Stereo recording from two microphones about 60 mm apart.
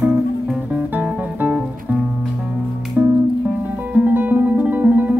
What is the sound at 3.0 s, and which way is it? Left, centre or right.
Music, right.